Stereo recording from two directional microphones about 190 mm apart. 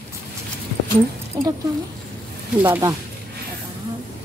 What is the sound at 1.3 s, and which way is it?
Speech, 15° right (ahead or behind).